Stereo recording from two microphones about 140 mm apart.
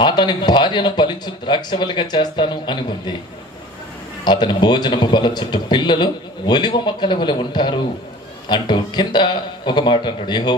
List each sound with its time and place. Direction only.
0.0 s a man's voice: 35° left (ahead or behind)
4.2 s a man's voice: 30° left (ahead or behind)